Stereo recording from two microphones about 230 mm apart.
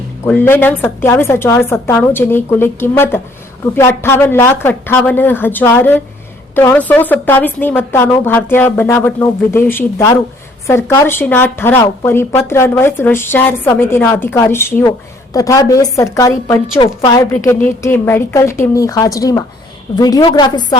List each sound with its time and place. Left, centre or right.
0.3 s speech: centre